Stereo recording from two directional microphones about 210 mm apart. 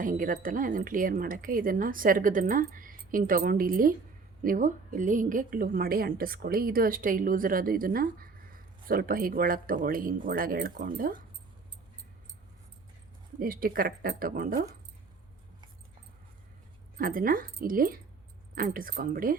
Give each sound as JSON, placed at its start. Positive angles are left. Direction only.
{"t": 0.0, "sound": "a woman's voice", "side_deg": -40}
{"t": 13.4, "sound": "a woman's voice", "side_deg": -45}
{"t": 17.0, "sound": "a woman's voice", "side_deg": -40}